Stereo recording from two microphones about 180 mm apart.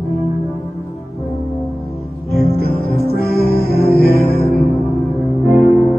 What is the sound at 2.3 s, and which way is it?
Music, 60° left (ahead or behind).